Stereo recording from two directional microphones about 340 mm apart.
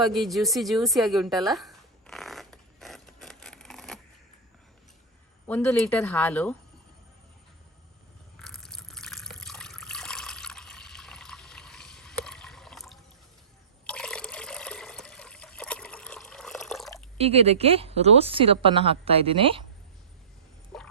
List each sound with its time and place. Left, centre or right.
0.0 s a sound: centre
5.5 s speech: centre
8.4 s water: centre
13.8 s liquid: centre
17.2 s speech: centre
20.7 s a sound: centre